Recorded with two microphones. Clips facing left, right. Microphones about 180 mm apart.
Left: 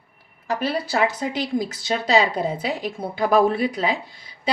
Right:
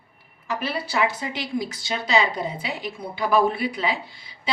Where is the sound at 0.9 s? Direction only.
40° left (ahead or behind).